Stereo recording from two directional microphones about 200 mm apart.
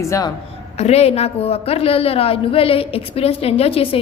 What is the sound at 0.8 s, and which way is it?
A woman's voice, 30° left (ahead or behind).